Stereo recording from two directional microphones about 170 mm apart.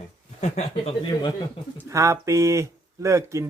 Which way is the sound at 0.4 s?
40° left (ahead or behind).